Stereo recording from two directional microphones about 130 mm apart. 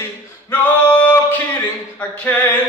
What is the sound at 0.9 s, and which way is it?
Music, 15° left (ahead or behind).